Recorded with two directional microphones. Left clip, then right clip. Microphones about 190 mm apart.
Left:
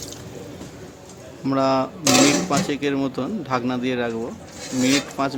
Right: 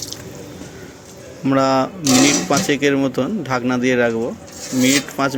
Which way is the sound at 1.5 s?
15° right (ahead or behind).